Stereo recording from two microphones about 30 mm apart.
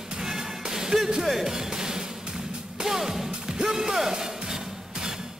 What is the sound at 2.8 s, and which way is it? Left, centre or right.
A man's voice, centre.